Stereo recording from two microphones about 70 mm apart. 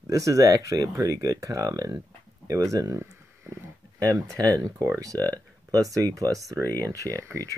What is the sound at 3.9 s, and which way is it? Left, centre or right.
Speech, right.